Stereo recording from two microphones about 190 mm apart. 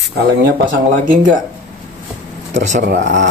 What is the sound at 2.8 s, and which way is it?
Speech, 65° right (ahead or behind).